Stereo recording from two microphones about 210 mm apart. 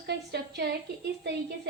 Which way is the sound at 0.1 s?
55° right (ahead or behind).